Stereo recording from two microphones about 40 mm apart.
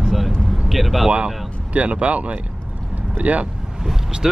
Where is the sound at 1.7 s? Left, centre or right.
Right.